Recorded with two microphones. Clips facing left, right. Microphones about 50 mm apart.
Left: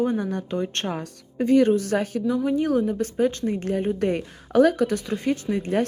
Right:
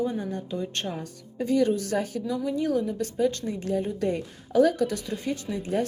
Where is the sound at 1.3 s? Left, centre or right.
Left.